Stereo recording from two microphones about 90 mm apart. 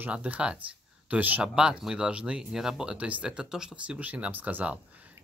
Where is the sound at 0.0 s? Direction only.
15° right (ahead or behind).